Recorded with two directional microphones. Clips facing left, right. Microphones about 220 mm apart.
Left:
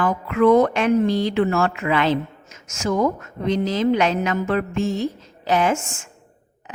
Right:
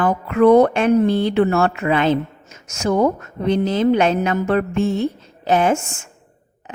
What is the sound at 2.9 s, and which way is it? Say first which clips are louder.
Speech: right 3 dB; 30° right (ahead or behind).